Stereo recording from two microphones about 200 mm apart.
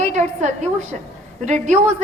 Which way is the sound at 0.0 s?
35° right (ahead or behind).